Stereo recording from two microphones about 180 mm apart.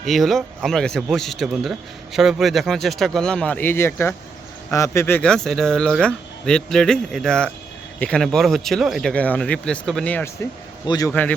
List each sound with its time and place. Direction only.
0.0 s speech: centre (ahead or behind)
10.8 s a man's voice: 20° left (ahead or behind)
11.1 s speech: 10° left (ahead or behind)